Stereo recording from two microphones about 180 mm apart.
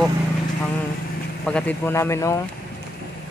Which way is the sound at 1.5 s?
5° left (ahead or behind).